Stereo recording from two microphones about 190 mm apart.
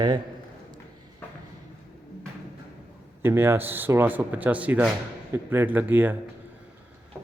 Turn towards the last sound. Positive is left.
turn(degrees=-10)  # may be behind; listen again after turning